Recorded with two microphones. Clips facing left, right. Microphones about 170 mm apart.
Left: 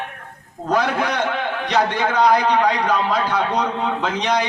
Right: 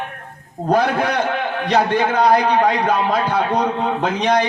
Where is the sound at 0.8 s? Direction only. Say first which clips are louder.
Right 2 dB; 50° right (ahead or behind).